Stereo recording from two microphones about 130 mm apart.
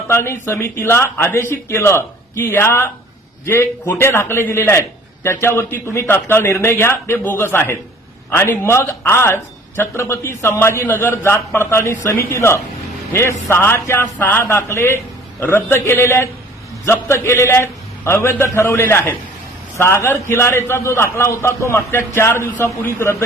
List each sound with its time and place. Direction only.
0.1 s a man's voice: 20° left (ahead or behind)